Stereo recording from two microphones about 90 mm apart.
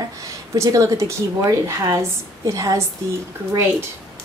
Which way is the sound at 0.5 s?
40° right (ahead or behind).